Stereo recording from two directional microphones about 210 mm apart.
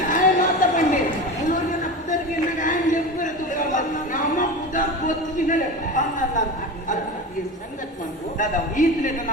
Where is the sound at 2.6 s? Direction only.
40° left (ahead or behind).